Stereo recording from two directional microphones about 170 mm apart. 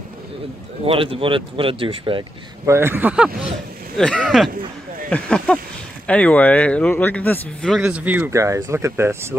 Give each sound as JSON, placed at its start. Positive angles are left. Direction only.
{"t": 0.8, "sound": "speech", "side_deg": -35}
{"t": 2.6, "sound": "speech", "side_deg": -15}
{"t": 3.9, "sound": "speech", "side_deg": 5}
{"t": 7.8, "sound": "speech", "side_deg": -10}